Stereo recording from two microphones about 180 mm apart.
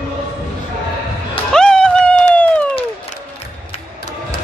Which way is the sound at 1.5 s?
5° left (ahead or behind).